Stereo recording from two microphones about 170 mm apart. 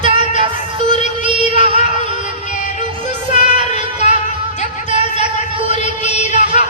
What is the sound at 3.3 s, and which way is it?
Child singing, 40° left (ahead or behind).